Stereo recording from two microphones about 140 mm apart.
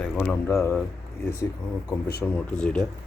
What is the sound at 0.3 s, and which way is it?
Speech, 15° left (ahead or behind).